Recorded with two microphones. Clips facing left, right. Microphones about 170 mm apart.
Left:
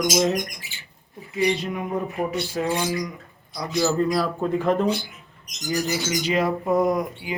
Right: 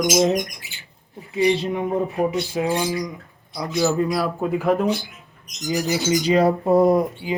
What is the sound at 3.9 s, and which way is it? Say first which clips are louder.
Speech: right 1 dB; 5° right (ahead or behind).